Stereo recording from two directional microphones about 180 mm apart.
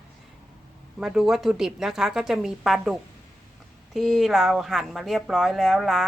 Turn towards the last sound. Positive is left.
turn(degrees=0)  # may be behind; listen again after turning